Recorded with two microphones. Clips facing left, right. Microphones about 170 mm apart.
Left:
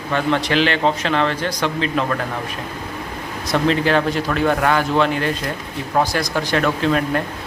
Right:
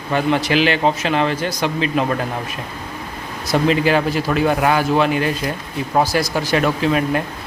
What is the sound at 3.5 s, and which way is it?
Speech, 10° right (ahead or behind).